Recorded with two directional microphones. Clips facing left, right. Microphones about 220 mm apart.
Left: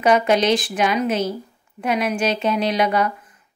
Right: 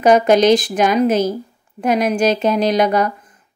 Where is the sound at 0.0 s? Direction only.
45° right (ahead or behind).